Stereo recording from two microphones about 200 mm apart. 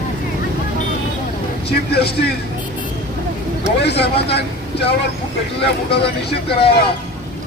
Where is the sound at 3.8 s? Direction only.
55° left (ahead or behind).